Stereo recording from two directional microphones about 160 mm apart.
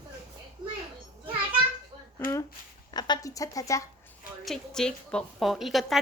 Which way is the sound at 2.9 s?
25° left (ahead or behind).